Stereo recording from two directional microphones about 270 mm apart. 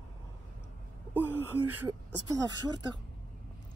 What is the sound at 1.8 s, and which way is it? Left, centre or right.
Speech, centre.